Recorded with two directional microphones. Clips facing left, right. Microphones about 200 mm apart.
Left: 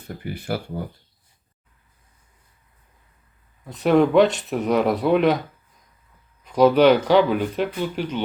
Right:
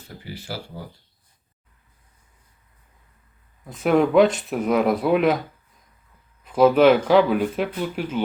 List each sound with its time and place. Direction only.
0.3 s speech: 55° left (ahead or behind)
3.7 s speech: centre (ahead or behind)
6.4 s speech: 5° right (ahead or behind)